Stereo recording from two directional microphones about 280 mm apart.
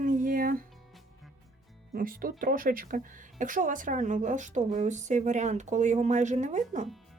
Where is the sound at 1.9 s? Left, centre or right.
Right.